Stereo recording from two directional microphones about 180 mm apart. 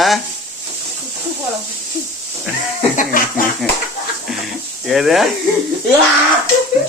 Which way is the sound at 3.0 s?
50° left (ahead or behind).